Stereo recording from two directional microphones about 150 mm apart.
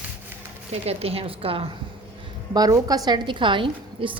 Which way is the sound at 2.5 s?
25° right (ahead or behind).